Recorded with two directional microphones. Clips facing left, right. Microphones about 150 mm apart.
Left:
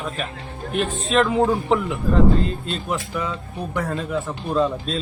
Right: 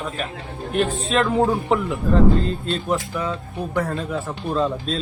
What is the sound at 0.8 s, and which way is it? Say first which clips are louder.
Speech: right 2 dB; 30° right (ahead or behind).